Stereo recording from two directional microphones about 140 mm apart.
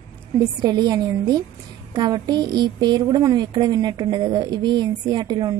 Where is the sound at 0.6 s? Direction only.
30° right (ahead or behind).